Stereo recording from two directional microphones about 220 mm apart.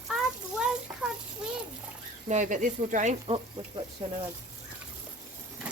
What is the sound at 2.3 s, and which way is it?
Speech, 35° right (ahead or behind).